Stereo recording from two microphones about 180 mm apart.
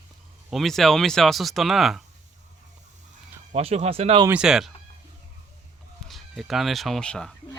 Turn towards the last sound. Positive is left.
turn(degrees=5)  # may be behind; listen again after turning